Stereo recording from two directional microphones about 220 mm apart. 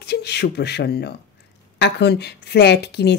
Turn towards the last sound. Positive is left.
turn(degrees=50)  # may be behind; listen again after turning